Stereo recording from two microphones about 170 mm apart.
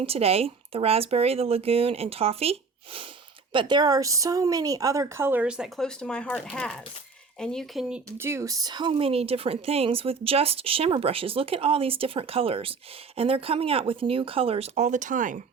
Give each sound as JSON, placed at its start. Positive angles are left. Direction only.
{"t": 0.0, "sound": "a woman's voice", "side_deg": -35}